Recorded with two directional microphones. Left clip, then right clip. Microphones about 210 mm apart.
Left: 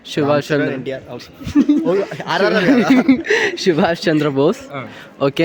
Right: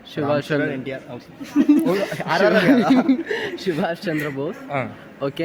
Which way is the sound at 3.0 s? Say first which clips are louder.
Left 7 dB; 35° left (ahead or behind).